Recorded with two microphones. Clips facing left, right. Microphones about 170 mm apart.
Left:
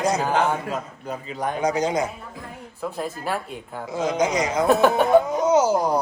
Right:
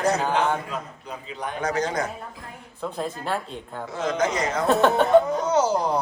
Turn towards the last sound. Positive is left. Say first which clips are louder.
# left 3 dB
turn(degrees=5)  # may be behind; listen again after turning